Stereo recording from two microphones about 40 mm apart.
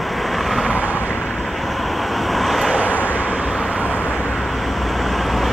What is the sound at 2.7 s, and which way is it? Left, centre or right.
Vehicle, right.